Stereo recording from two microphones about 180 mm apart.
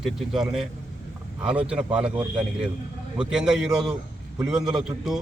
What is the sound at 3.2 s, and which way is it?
Speech, 5° right (ahead or behind).